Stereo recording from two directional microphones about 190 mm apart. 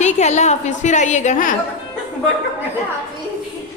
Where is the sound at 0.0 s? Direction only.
35° left (ahead or behind).